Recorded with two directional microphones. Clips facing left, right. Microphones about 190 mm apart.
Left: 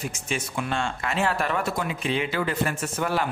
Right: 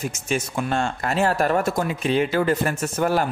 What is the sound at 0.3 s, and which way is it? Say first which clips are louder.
A man's voice: right 5 dB; 45° right (ahead or behind).